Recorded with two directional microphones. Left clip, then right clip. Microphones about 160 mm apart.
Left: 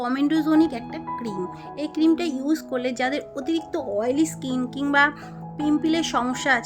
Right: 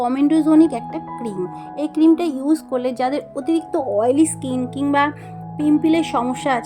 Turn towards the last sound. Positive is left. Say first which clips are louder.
# right 2 dB
turn(degrees=0)  # may be behind; listen again after turning